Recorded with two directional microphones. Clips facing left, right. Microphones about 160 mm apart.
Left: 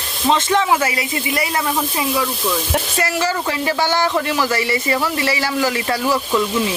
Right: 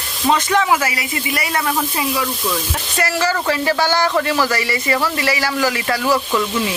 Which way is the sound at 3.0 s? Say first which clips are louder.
Right 4 dB; 20° left (ahead or behind).